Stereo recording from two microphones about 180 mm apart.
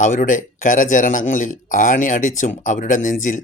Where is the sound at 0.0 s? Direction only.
45° left (ahead or behind).